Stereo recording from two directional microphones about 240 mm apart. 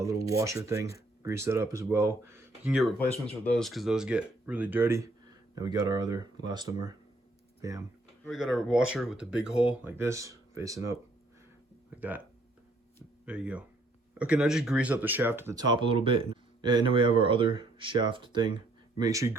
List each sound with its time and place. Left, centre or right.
0.3 s speech: centre
8.2 s speech: centre
11.9 s speech: centre
13.2 s speech: centre